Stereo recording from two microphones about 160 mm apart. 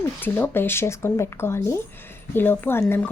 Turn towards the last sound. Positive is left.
turn(degrees=15)  # may be behind; listen again after turning